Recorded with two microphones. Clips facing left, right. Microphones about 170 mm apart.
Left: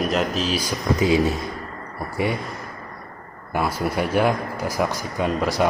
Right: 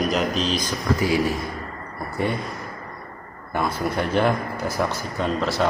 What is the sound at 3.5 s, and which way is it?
Speech, 10° left (ahead or behind).